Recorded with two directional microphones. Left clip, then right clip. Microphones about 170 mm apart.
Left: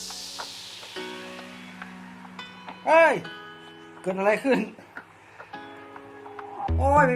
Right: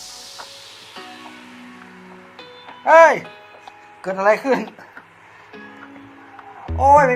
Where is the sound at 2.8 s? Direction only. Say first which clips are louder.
Right 8 dB; 25° right (ahead or behind).